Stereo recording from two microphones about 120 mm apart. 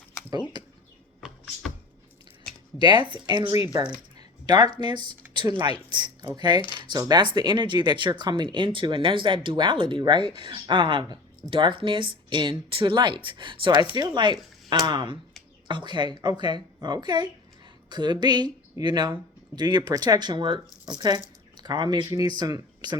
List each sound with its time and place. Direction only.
0.5 s speech: 35° right (ahead or behind)
2.7 s speech: 40° right (ahead or behind)
6.6 s speech: 45° left (ahead or behind)
7.0 s speech: 35° right (ahead or behind)